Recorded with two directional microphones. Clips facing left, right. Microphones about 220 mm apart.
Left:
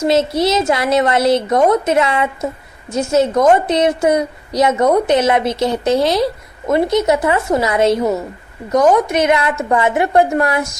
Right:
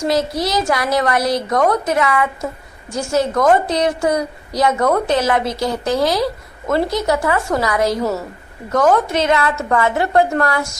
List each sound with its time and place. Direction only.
0.0 s a woman's voice: 25° left (ahead or behind)